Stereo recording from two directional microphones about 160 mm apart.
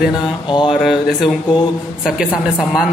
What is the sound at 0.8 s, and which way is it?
Speech, centre (ahead or behind).